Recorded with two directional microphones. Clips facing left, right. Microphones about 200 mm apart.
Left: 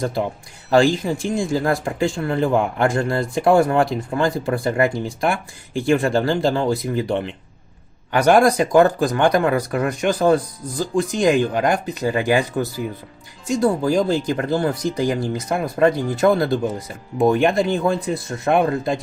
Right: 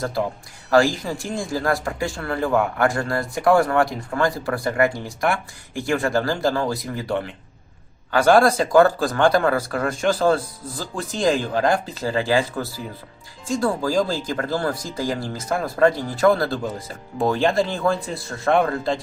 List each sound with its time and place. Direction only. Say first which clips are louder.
1.0 s speech: left 5 dB; 25° left (ahead or behind)